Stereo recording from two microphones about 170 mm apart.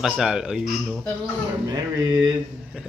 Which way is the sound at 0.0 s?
5° right (ahead or behind).